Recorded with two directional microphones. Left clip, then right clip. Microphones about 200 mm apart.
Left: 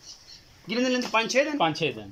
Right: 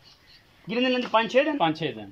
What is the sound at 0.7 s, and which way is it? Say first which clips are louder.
Speech: right 2 dB; 10° right (ahead or behind).